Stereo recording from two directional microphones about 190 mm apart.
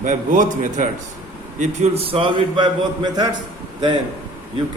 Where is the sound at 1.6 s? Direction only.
30° right (ahead or behind).